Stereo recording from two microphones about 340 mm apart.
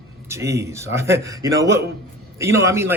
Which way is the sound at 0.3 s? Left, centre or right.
Centre.